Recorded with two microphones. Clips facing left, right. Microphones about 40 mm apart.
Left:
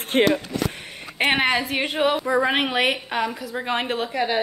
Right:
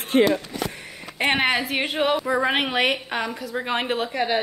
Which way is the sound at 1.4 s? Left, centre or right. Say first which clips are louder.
Even; centre.